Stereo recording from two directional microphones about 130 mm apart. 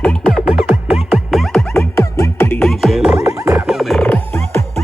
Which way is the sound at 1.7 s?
20° left (ahead or behind).